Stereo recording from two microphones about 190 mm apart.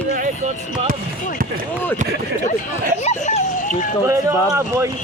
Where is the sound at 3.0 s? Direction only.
35° left (ahead or behind).